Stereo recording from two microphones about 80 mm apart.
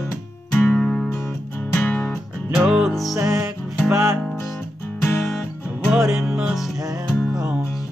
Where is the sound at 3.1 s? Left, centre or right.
Right.